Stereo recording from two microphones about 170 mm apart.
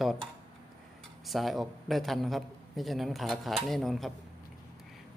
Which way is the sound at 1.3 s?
Centre (ahead or behind).